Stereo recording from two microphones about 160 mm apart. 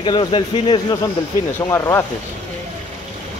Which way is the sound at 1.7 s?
15° left (ahead or behind).